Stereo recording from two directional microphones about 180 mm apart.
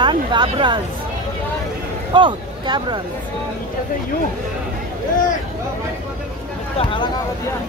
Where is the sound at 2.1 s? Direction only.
25° right (ahead or behind).